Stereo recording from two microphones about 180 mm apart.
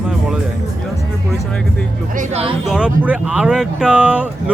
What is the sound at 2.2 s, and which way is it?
Speech, 35° right (ahead or behind).